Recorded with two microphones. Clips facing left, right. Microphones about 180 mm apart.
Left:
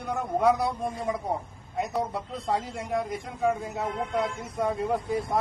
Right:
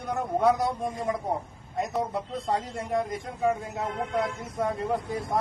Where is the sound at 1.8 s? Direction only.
Centre (ahead or behind).